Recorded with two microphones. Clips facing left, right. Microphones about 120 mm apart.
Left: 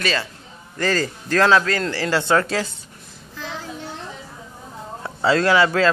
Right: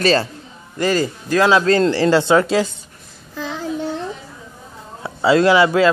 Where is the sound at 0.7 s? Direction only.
15° right (ahead or behind).